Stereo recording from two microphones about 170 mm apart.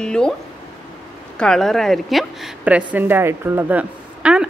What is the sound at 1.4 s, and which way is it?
A woman's voice, 5° left (ahead or behind).